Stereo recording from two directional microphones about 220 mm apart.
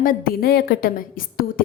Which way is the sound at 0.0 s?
40° left (ahead or behind).